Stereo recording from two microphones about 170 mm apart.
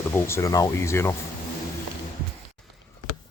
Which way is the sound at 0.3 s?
15° left (ahead or behind).